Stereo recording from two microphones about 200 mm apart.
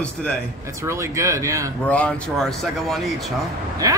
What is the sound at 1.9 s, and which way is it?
A man's voice, 5° left (ahead or behind).